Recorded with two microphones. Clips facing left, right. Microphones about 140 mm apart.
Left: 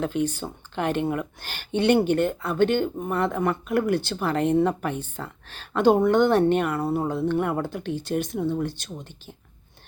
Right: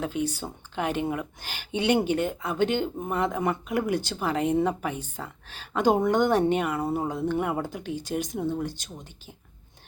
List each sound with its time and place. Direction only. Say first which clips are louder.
0.0 s speech: left 3 dB; 10° right (ahead or behind)
1.4 s speech: left 4 dB; 10° right (ahead or behind)
3.8 s speech: left 3 dB; 55° left (ahead or behind)
4.2 s speech: left 3 dB; 10° right (ahead or behind)
7.1 s speech: left 3 dB; 10° right (ahead or behind)